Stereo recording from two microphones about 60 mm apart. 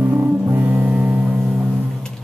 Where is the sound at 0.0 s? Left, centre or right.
Right.